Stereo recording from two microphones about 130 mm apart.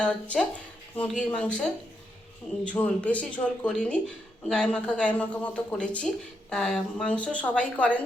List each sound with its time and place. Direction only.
0.0 s speech: 10° left (ahead or behind)